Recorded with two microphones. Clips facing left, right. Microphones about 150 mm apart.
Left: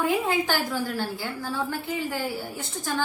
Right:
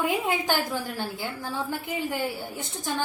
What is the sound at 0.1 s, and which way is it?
A woman's voice, 20° right (ahead or behind).